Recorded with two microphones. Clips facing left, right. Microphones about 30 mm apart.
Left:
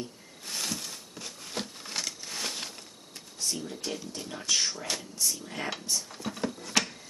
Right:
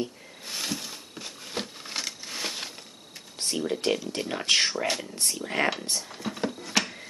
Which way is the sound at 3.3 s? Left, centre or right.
Right.